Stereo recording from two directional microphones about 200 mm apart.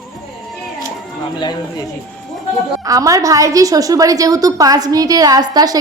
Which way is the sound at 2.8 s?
15° right (ahead or behind).